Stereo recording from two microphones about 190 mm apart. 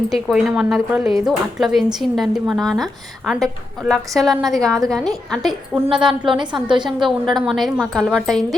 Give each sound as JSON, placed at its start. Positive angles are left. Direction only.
{"t": 0.1, "sound": "speech", "side_deg": 0}
{"t": 6.3, "sound": "a woman's voice", "side_deg": -25}
{"t": 7.0, "sound": "speech", "side_deg": 0}